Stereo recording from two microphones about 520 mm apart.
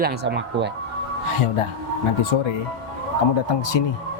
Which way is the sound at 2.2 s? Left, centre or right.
Left.